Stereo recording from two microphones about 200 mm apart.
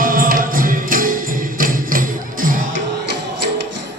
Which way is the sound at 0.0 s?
45° right (ahead or behind).